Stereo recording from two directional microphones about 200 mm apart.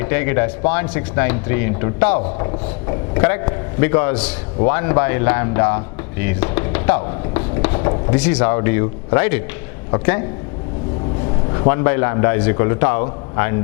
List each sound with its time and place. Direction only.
0.0 s speech: 15° left (ahead or behind)
11.7 s speech: 15° left (ahead or behind)